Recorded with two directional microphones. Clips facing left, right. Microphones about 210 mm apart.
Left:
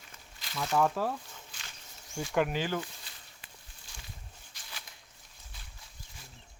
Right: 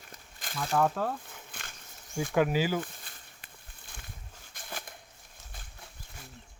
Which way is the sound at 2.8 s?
50° right (ahead or behind).